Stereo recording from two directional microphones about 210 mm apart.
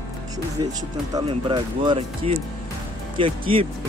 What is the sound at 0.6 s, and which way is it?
Speech, 20° right (ahead or behind).